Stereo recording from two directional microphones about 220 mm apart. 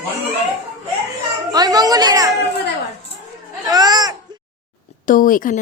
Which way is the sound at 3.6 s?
15° right (ahead or behind).